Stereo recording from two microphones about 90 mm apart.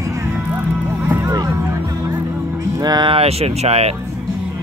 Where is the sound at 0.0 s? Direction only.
40° right (ahead or behind).